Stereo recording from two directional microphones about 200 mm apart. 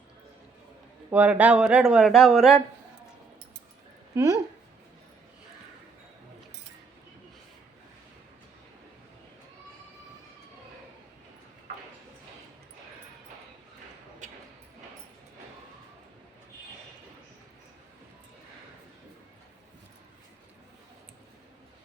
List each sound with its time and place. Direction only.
1.1 s speech: 5° right (ahead or behind)
4.1 s a woman's voice: 15° right (ahead or behind)